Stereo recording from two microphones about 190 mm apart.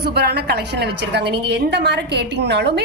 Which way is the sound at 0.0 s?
60° right (ahead or behind).